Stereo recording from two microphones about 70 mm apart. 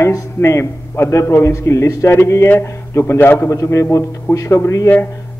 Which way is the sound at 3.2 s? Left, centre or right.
Left.